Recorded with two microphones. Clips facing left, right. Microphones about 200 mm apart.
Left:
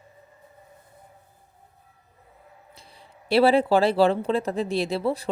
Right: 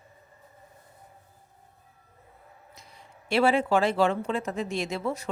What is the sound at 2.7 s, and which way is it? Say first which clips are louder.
Speech: left 1 dB; 30° left (ahead or behind).